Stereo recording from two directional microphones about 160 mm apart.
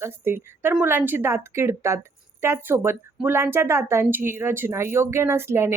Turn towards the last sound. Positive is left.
turn(degrees=-15)  # may be behind; listen again after turning